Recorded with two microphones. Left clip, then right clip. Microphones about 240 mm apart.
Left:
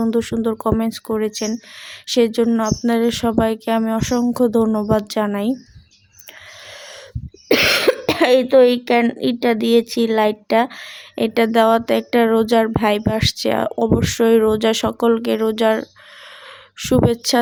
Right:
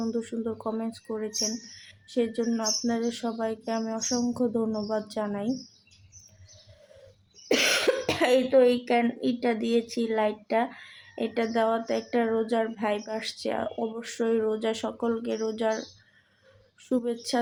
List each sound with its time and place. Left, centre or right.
0.0 s speech: left
7.4 s speech: left